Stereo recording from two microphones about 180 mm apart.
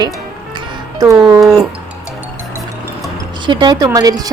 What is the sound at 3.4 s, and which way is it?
Speech, 25° right (ahead or behind).